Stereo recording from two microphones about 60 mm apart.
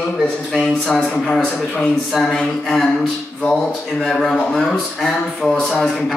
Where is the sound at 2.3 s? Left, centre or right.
Centre.